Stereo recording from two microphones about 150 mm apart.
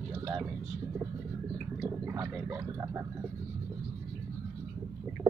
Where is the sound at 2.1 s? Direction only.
15° right (ahead or behind).